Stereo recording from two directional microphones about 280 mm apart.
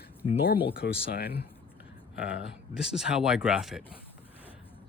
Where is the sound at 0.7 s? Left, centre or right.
Left.